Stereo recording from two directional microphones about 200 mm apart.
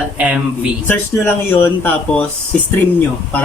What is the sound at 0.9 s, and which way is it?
Speech, 10° left (ahead or behind).